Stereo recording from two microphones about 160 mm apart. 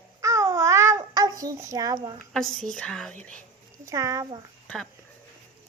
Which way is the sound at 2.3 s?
Centre (ahead or behind).